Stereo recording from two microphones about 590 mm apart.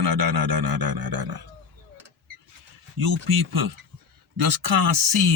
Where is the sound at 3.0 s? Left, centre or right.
Right.